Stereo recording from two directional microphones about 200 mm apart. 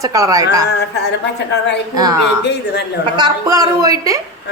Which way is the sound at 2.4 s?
60° left (ahead or behind).